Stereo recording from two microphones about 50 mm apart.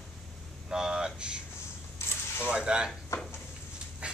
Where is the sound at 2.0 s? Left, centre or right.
Left.